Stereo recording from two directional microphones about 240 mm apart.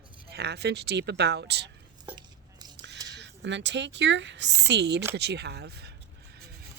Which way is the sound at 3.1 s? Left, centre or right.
Right.